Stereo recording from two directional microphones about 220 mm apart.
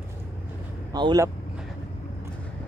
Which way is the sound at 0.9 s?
20° right (ahead or behind).